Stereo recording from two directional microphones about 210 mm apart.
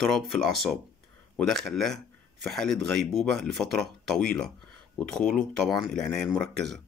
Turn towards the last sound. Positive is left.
turn(degrees=5)  # may be behind; listen again after turning